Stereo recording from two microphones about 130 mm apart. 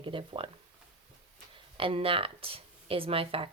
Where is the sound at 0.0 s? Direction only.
40° right (ahead or behind).